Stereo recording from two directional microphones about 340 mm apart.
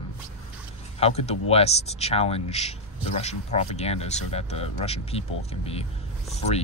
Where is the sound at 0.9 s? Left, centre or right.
Centre.